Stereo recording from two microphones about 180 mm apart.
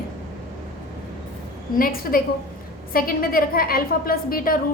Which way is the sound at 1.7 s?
55° left (ahead or behind).